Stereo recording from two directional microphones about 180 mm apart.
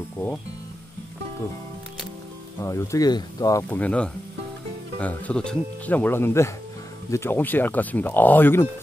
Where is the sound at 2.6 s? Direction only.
15° left (ahead or behind).